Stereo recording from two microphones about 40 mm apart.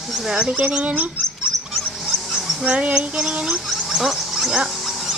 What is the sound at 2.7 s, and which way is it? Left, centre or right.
Female singing, right.